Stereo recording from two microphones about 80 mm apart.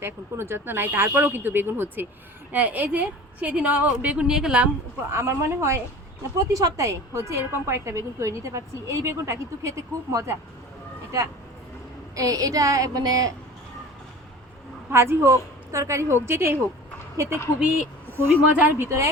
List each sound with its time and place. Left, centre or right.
0.0 s a woman's voice: right; by 4.7 s centre
5.1 s a woman's voice: right
6.5 s a woman's voice: right
12.1 s a woman's voice: right
14.8 s a woman's voice: right